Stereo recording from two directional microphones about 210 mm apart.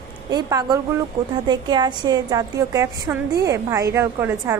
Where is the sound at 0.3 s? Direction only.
20° right (ahead or behind).